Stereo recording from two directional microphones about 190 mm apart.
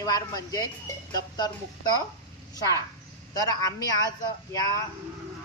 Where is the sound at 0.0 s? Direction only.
20° left (ahead or behind).